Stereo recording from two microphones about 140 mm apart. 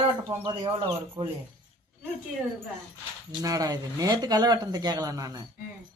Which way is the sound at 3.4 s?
25° right (ahead or behind).